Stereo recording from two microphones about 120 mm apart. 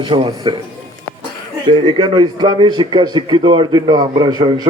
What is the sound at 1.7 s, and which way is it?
A man's voice, 45° right (ahead or behind).